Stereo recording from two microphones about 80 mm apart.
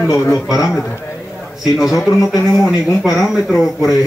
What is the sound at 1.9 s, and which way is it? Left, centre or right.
Speech, left.